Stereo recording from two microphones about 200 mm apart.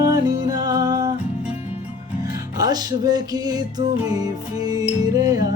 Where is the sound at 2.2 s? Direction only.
20° right (ahead or behind).